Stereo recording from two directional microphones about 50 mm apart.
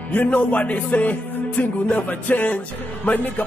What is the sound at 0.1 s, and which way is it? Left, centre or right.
Speech, left.